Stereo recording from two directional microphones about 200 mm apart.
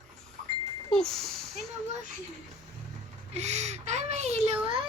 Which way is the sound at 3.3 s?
35° right (ahead or behind).